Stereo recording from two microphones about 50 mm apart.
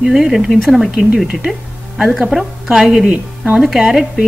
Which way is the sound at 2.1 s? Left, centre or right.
Centre.